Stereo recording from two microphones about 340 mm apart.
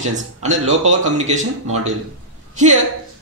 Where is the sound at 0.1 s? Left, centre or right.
Right.